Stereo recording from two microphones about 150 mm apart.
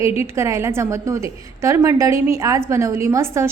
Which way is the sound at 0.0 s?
20° right (ahead or behind).